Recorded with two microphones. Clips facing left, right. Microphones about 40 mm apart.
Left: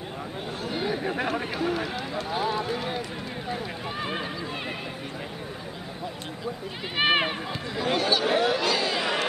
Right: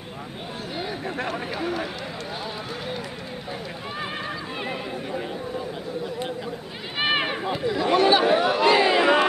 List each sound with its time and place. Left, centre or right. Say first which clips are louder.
0.7 s chatter: left 2 dB; centre
1.6 s speech: even; centre
2.3 s speech: left 5 dB; centre
7.0 s speech: left 1 dB; centre
8.0 s speech: right 8 dB; right
8.3 s chatter: right 5 dB; centre; by 9.2 s right